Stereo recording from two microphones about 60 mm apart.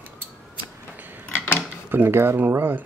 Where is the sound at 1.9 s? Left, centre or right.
Right.